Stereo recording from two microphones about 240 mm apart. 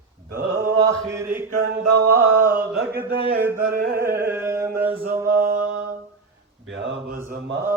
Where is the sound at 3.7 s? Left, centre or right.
Right.